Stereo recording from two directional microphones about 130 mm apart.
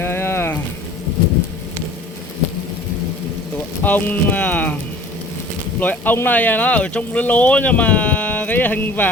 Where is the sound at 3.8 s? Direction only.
15° left (ahead or behind).